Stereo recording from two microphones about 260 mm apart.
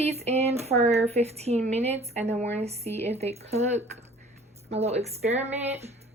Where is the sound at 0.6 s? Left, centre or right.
Right.